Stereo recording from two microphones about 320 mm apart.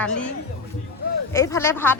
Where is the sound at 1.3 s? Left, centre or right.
Centre.